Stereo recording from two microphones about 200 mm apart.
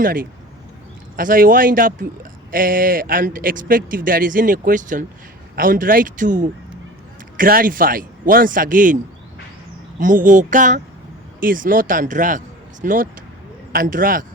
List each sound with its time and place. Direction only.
0.0 s speech: 45° right (ahead or behind)
10.0 s speech: 40° right (ahead or behind)